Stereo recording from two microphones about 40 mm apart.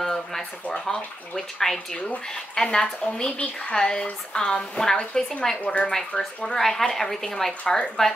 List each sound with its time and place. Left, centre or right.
0.0 s speech: centre